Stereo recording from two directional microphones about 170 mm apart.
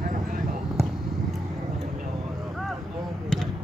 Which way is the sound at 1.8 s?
50° right (ahead or behind).